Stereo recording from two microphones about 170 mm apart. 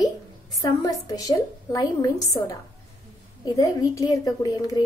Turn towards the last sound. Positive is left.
turn(degrees=20)  # may be behind; listen again after turning